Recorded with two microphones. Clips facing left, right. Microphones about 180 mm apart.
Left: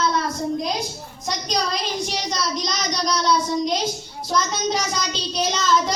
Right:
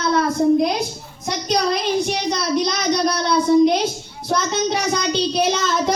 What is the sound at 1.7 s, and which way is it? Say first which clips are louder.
Speech: right 6 dB; 60° right (ahead or behind).